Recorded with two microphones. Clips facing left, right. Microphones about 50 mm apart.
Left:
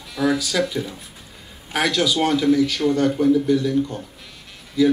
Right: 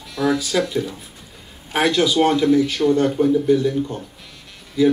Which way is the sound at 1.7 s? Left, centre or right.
Centre.